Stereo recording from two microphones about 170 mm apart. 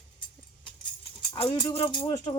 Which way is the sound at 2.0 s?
25° left (ahead or behind).